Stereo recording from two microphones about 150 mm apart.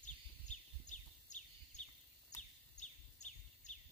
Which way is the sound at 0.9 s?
50° left (ahead or behind).